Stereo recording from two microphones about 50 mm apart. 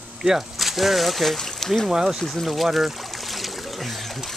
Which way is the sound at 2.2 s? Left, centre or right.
Centre.